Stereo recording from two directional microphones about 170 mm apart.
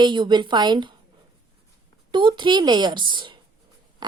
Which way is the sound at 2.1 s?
25° right (ahead or behind).